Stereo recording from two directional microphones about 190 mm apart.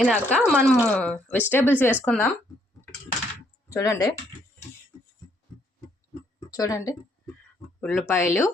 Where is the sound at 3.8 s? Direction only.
15° left (ahead or behind).